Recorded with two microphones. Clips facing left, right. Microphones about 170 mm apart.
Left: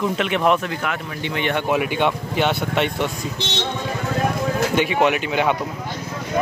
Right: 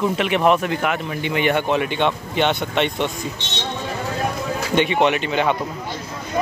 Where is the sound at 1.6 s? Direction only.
10° left (ahead or behind).